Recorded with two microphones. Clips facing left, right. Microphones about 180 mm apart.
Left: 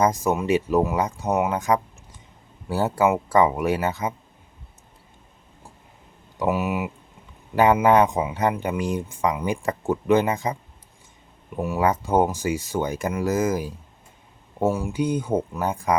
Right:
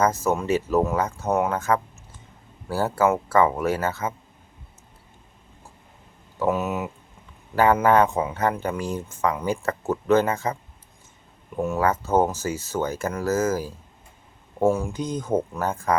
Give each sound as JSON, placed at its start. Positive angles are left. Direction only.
{"t": 0.0, "sound": "speech", "side_deg": 15}
{"t": 6.4, "sound": "speech", "side_deg": 10}
{"t": 14.6, "sound": "speech", "side_deg": 0}